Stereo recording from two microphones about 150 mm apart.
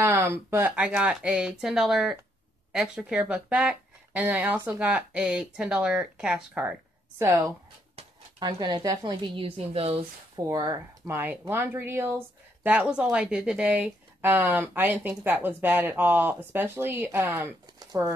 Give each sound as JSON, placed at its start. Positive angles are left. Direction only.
{"t": 0.0, "sound": "speech", "side_deg": -15}
{"t": 8.4, "sound": "a woman's voice", "side_deg": -25}
{"t": 10.3, "sound": "a woman's voice", "side_deg": -25}
{"t": 11.1, "sound": "speech", "side_deg": -15}
{"t": 17.7, "sound": "a sound", "side_deg": -25}